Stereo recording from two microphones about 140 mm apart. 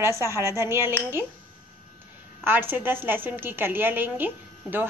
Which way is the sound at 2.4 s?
15° right (ahead or behind).